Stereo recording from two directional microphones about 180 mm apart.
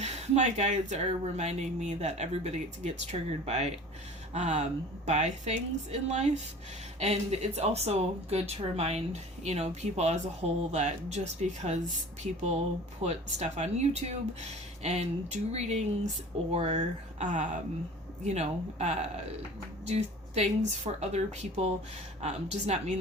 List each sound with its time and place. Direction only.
0.0 s speech: 40° right (ahead or behind)